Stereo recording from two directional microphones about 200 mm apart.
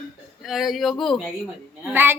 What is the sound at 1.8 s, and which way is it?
Speech, 10° right (ahead or behind).